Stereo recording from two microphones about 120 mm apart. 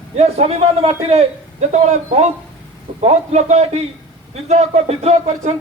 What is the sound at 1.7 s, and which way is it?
A man's voice, 70° right (ahead or behind).